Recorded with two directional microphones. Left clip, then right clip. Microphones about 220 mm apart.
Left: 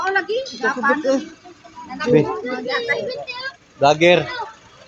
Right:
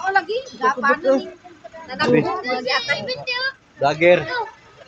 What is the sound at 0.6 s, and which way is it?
Speech, 40° right (ahead or behind).